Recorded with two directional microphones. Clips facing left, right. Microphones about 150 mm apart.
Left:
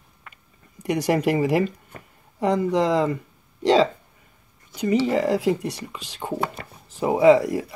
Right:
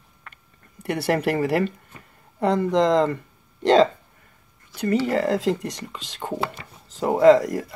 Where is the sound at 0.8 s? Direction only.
15° left (ahead or behind).